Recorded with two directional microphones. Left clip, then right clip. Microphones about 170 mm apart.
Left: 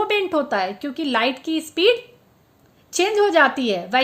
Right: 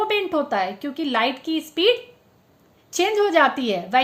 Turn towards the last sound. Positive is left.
turn(degrees=20)  # may be behind; listen again after turning